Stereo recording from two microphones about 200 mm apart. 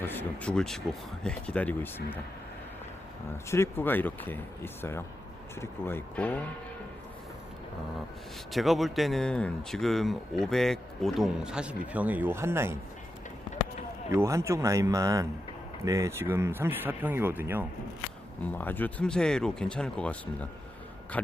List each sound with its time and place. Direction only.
0.0 s speech: 10° left (ahead or behind)
3.5 s speech: 10° left (ahead or behind)
8.5 s speech: centre (ahead or behind)
14.1 s speech: 15° right (ahead or behind)
18.5 s speech: 10° left (ahead or behind)